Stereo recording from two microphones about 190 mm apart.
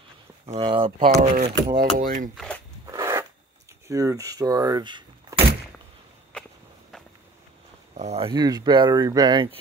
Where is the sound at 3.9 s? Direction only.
15° right (ahead or behind).